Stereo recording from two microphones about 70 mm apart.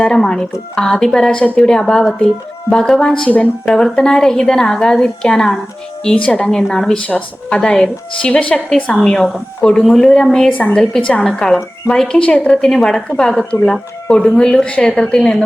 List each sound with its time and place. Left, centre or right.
0.0 s a woman's voice: centre
3.9 s a woman's voice: centre
10.5 s a woman's voice: left
10.8 s a woman's voice: centre